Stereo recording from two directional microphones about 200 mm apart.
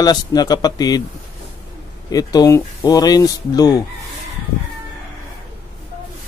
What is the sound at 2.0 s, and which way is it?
Speech, 20° left (ahead or behind).